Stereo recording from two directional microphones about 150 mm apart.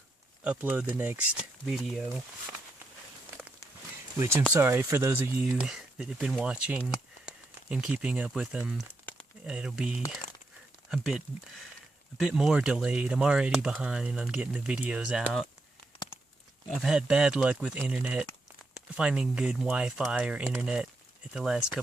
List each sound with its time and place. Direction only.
0.4 s speech: 10° right (ahead or behind)
4.2 s speech: 15° right (ahead or behind)
12.2 s speech: 5° right (ahead or behind)
16.7 s speech: 5° right (ahead or behind)